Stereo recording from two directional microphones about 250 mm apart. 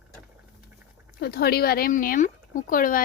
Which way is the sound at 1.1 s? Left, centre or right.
Left.